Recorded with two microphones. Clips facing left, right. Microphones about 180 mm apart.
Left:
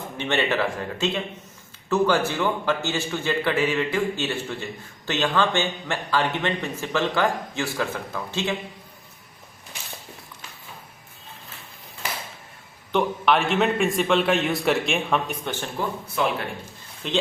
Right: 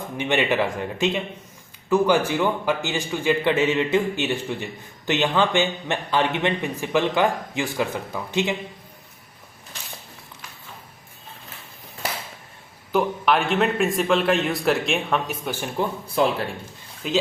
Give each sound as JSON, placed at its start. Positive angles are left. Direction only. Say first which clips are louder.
{"t": 0.2, "sound": "a man's voice", "louder": "right 2 dB", "side_deg": -15}
{"t": 12.9, "sound": "a man's voice", "louder": "even", "side_deg": 0}
{"t": 16.0, "sound": "a man's voice", "louder": "right 4 dB", "side_deg": -35}
{"t": 17.0, "sound": "a man's voice", "louder": "right 3 dB", "side_deg": -5}